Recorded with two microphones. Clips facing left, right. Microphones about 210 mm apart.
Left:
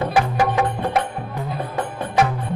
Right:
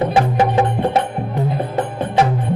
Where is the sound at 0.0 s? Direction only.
25° right (ahead or behind).